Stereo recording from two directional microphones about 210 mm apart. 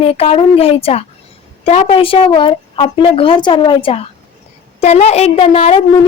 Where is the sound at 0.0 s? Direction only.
30° left (ahead or behind).